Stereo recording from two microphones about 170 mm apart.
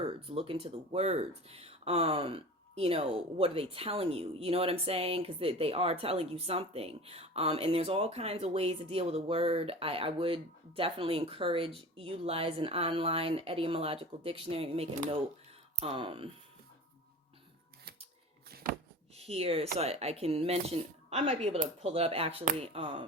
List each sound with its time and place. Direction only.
0.3 s speech: 35° right (ahead or behind)
18.5 s a sound: 65° right (ahead or behind)
19.1 s speech: 35° right (ahead or behind)